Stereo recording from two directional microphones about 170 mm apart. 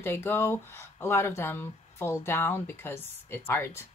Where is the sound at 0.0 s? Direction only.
15° left (ahead or behind).